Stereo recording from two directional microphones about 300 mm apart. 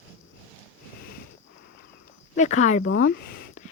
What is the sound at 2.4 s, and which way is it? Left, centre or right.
Speech, left.